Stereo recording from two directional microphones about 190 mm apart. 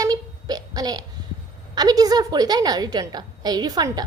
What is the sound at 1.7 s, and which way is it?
A woman's voice, 20° right (ahead or behind).